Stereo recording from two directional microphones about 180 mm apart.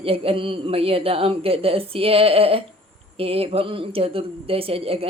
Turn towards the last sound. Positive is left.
turn(degrees=-30)  # may be behind; listen again after turning